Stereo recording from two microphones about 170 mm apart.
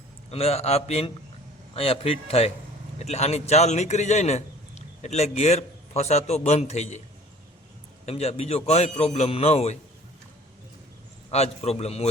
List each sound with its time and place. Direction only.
0.3 s a man's voice: 35° left (ahead or behind)
8.0 s a man's voice: 40° left (ahead or behind)
11.3 s a man's voice: 40° left (ahead or behind)